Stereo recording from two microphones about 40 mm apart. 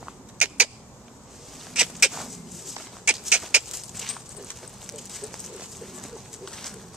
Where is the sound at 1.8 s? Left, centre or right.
Centre.